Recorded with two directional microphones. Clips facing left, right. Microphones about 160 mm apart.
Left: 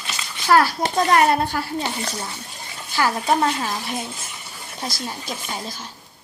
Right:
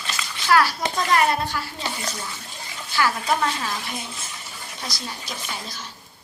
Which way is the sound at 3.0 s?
30° left (ahead or behind).